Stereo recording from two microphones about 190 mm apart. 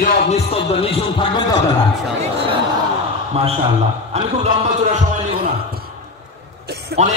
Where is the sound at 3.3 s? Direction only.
30° right (ahead or behind).